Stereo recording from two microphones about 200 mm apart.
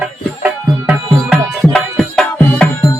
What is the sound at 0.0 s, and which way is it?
Music, 5° right (ahead or behind).